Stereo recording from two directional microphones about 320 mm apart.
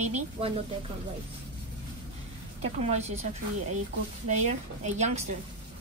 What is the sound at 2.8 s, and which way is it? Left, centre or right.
Speech, right.